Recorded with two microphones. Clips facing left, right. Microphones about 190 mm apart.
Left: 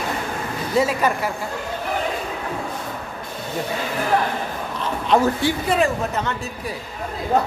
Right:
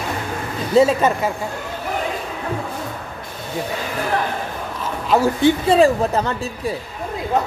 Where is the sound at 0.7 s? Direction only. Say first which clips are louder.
Right 5 dB; 25° right (ahead or behind).